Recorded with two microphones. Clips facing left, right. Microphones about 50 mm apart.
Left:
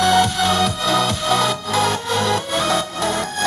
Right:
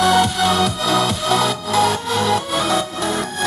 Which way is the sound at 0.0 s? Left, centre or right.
Centre.